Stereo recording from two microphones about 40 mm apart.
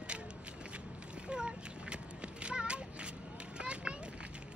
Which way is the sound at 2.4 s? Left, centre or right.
Right.